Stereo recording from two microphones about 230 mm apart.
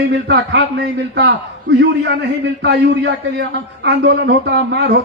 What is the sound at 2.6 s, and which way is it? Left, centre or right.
A man's voice, right.